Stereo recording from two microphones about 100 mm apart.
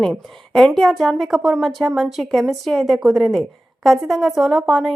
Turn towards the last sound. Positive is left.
turn(degrees=0)  # may be behind; listen again after turning